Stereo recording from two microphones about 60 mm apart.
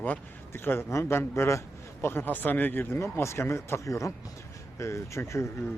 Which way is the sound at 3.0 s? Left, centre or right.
Left.